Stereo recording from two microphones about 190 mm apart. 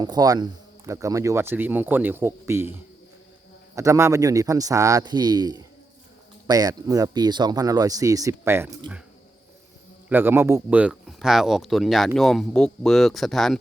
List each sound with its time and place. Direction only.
0.0 s speech: 20° right (ahead or behind)
3.8 s speech: 15° right (ahead or behind)
10.1 s speech: 10° right (ahead or behind)